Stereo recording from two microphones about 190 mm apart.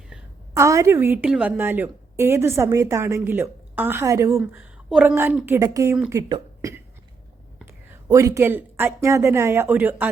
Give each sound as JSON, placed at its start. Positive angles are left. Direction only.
{"t": 0.5, "sound": "a woman's voice", "side_deg": -15}